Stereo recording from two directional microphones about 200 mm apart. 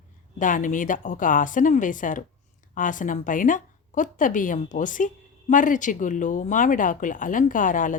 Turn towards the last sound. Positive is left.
turn(degrees=40)  # may be behind; listen again after turning